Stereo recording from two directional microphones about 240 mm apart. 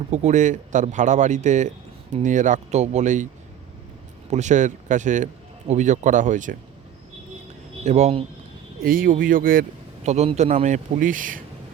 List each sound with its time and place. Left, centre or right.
0.1 s a man's voice: right
4.3 s a man's voice: right
7.9 s a man's voice: right